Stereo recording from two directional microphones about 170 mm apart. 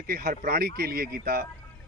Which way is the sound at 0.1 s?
60° right (ahead or behind).